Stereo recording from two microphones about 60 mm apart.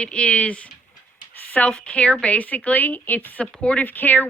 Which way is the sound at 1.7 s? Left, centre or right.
Centre.